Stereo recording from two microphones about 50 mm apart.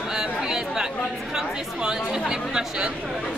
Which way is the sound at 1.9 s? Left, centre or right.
Centre.